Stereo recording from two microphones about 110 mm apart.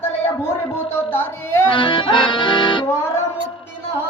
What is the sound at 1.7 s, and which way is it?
Accordion, 50° left (ahead or behind).